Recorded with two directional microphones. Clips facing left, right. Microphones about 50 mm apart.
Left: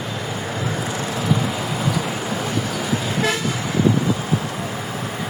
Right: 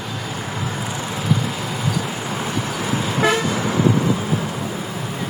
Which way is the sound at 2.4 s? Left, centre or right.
Centre.